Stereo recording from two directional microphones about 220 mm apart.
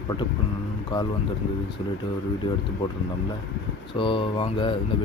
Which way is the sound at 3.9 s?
25° left (ahead or behind).